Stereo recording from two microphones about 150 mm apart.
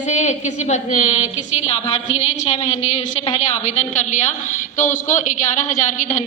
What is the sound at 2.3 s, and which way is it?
Speech, 50° left (ahead or behind).